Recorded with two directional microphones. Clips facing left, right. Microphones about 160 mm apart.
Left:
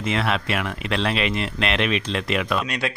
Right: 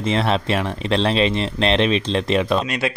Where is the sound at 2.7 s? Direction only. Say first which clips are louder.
Right 4 dB; centre (ahead or behind).